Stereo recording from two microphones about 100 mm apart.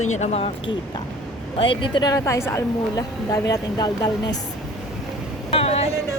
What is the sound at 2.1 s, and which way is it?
Speech, 30° left (ahead or behind).